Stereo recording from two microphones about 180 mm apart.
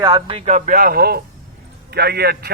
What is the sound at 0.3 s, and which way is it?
A man's voice, 40° right (ahead or behind).